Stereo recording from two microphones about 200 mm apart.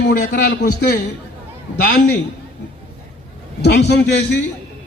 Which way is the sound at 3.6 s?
55° left (ahead or behind).